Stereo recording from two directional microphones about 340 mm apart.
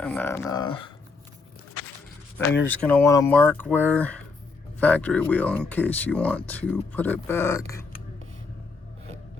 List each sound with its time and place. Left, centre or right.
0.0 s speech: centre
2.6 s speech: centre